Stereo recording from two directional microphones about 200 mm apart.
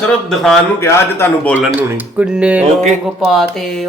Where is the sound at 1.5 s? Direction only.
10° right (ahead or behind).